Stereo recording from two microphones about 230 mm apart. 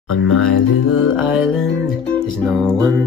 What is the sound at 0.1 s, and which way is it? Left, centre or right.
Music, left.